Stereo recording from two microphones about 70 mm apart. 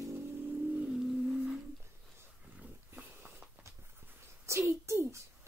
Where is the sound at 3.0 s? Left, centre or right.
Right.